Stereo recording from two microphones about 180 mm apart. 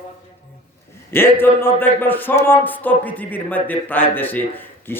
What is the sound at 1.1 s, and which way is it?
Speech, 10° left (ahead or behind).